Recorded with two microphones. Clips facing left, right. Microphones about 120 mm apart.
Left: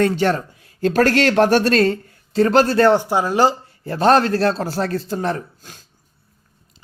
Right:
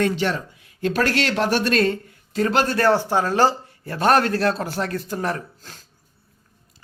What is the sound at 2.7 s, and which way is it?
Speech, 20° left (ahead or behind).